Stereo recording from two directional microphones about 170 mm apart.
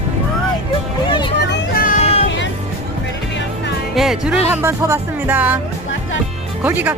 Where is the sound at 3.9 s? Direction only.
Centre (ahead or behind).